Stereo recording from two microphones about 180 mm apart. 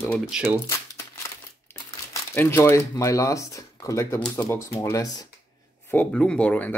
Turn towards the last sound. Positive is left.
turn(degrees=10)  # may be behind; listen again after turning